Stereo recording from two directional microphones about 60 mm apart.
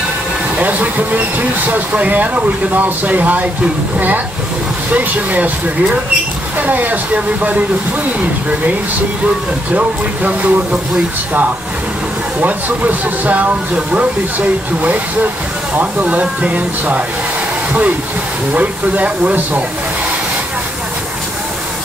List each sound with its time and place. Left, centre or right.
0.6 s speech: right
4.9 s speech: right
6.6 s speech: right
9.8 s speech: right
12.4 s speech: right
18.5 s speech: right